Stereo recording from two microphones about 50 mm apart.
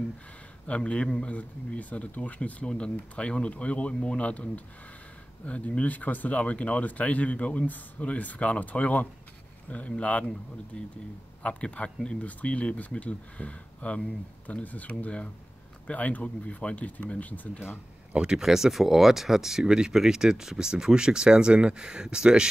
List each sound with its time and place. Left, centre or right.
0.7 s speech: left
1.3 s speech: left
2.6 s speech: centre
18.1 s speech: centre